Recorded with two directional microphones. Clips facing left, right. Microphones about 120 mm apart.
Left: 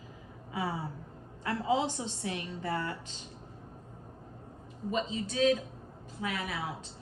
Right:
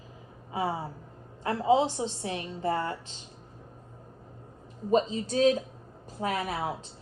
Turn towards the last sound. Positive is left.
turn(degrees=-40)  # may be behind; listen again after turning